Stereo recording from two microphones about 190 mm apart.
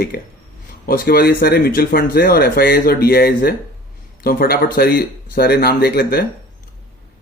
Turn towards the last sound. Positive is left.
turn(degrees=50)  # may be behind; listen again after turning